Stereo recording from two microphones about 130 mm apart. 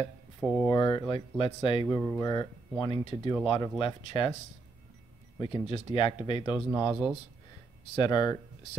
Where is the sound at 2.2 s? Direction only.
30° left (ahead or behind).